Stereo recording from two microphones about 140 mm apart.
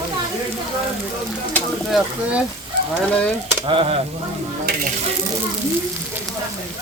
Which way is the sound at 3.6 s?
40° right (ahead or behind).